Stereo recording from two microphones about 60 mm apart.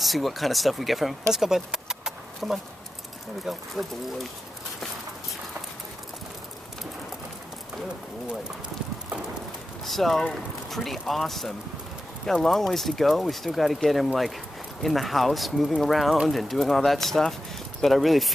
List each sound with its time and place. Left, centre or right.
0.0 s speech: centre
9.8 s speech: centre